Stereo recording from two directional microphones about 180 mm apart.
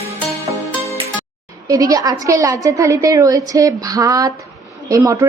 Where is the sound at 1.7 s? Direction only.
20° right (ahead or behind).